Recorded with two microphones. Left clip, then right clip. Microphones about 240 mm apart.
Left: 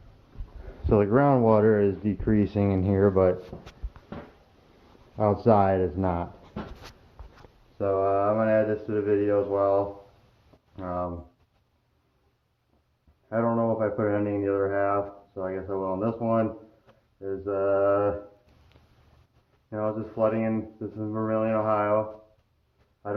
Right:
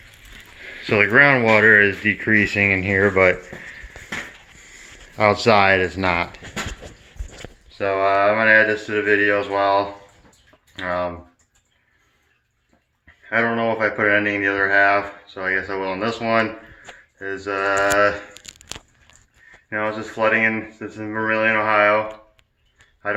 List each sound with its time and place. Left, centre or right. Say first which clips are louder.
0.9 s speech: right 8 dB; centre
1.5 s speech: right 7 dB; centre
1.7 s speech: right 10 dB; centre
5.1 s speech: right 8 dB; right
5.4 s speech: right 5 dB; centre
7.8 s speech: right 6 dB; centre
10.8 s speech: right 8 dB; centre
13.3 s speech: right 6 dB; centre
17.2 s a sound: right 4 dB; centre
19.7 s speech: right 6 dB; centre